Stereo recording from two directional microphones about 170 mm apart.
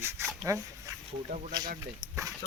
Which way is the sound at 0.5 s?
20° right (ahead or behind).